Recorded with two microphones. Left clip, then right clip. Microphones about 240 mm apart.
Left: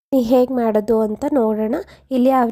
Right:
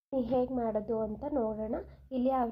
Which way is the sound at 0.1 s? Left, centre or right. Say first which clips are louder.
Left 15 dB; left.